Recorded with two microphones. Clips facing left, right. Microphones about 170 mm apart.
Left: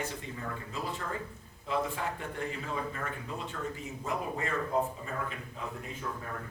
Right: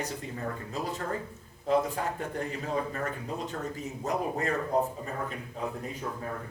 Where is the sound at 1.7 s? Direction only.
40° right (ahead or behind).